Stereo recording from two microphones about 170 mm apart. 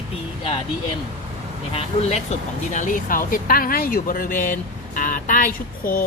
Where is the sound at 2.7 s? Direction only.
50° left (ahead or behind).